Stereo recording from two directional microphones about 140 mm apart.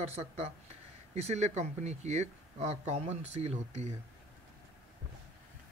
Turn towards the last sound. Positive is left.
turn(degrees=-50)  # may be behind; listen again after turning